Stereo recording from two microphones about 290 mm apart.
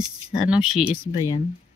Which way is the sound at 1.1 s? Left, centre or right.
Centre.